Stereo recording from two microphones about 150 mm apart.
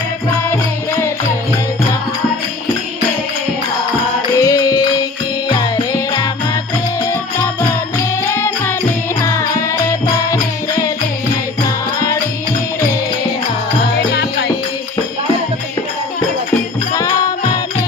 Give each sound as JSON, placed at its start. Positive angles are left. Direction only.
{"t": 0.5, "sound": "music", "side_deg": 20}
{"t": 4.4, "sound": "music", "side_deg": 25}
{"t": 14.1, "sound": "music", "side_deg": 90}
{"t": 16.9, "sound": "music", "side_deg": 20}